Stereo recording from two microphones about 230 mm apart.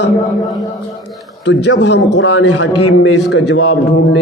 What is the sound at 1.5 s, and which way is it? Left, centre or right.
A man's voice, left.